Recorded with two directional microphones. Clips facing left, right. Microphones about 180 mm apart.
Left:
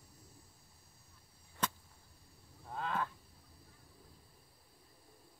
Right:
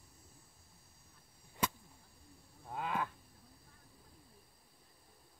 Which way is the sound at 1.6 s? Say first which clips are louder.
Right 2 dB; 10° right (ahead or behind).